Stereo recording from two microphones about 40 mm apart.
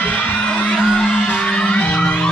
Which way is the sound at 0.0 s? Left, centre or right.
Left.